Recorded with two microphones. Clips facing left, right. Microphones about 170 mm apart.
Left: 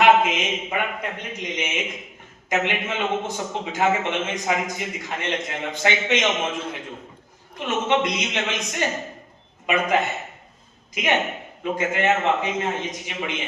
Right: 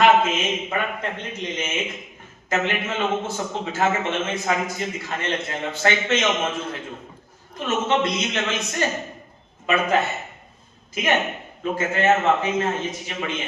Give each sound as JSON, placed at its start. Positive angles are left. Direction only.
{"t": 0.0, "sound": "a man's voice", "side_deg": 15}
{"t": 7.6, "sound": "a man's voice", "side_deg": 15}